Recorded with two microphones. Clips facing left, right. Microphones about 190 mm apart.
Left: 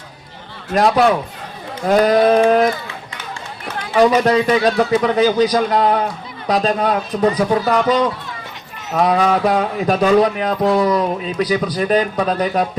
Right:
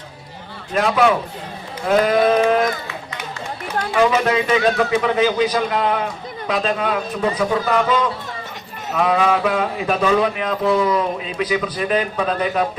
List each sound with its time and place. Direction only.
0.7 s speech: 40° left (ahead or behind)
3.9 s speech: 35° left (ahead or behind)